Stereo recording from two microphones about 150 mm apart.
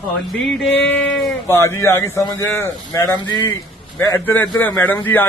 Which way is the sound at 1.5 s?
15° left (ahead or behind).